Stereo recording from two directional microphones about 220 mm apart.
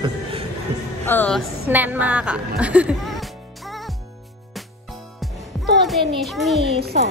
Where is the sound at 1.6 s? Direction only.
10° right (ahead or behind).